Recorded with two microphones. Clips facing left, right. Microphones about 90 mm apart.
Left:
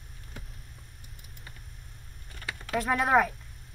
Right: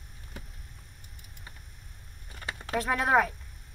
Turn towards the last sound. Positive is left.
turn(degrees=0)  # may be behind; listen again after turning